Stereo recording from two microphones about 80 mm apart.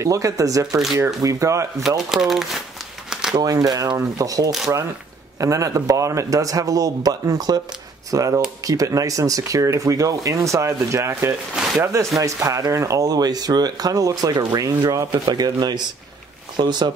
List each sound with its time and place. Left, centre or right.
0.0 s speech: right
1.8 s speech: centre
3.1 s crumpling: centre
3.3 s speech: right
15.2 s speech: right
16.5 s speech: right